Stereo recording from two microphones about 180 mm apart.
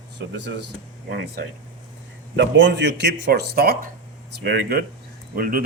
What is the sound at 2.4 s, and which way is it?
Speech, 85° right.